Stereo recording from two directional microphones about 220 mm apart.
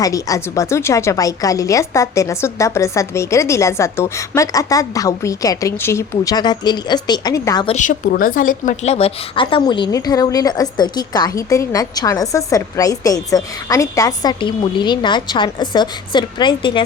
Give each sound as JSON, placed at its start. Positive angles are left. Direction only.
{"t": 0.0, "sound": "a woman's voice", "side_deg": 15}
{"t": 7.8, "sound": "a woman's voice", "side_deg": 40}